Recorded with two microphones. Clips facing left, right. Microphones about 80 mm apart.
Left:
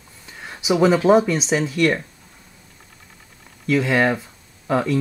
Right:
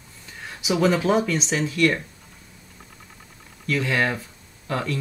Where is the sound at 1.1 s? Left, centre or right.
Centre.